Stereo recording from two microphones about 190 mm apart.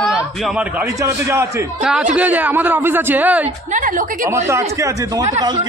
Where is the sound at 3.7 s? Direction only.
45° right (ahead or behind).